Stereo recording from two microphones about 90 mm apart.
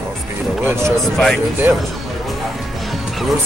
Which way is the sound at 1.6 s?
25° right (ahead or behind).